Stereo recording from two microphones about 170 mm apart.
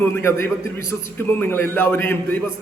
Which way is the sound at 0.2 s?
15° left (ahead or behind).